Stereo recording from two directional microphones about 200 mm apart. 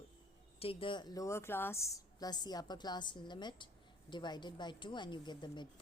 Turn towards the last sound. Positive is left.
turn(degrees=20)  # may be behind; listen again after turning